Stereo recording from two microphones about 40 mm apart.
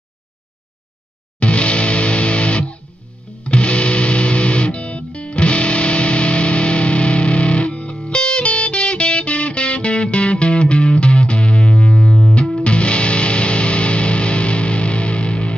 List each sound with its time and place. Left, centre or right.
1.4 s music: left